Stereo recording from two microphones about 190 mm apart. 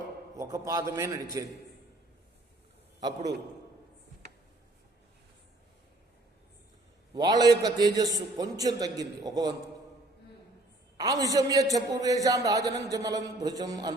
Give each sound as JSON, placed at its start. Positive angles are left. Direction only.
{"t": 0.3, "sound": "a man's voice", "side_deg": -15}
{"t": 7.1, "sound": "a man's voice", "side_deg": -20}
{"t": 10.9, "sound": "a man's voice", "side_deg": -20}